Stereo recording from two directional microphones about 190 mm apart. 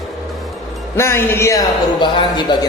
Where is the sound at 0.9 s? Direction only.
15° left (ahead or behind).